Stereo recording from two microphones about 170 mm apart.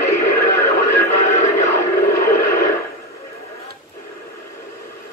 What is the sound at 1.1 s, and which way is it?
Music, 45° left (ahead or behind).